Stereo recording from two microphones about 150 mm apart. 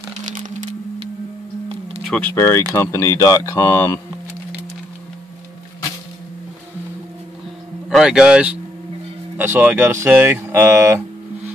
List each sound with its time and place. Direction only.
0.2 s a sound: 60° right (ahead or behind)
2.0 s speech: 10° left (ahead or behind)
2.7 s speech: 20° left (ahead or behind)
7.9 s speech: 5° right (ahead or behind)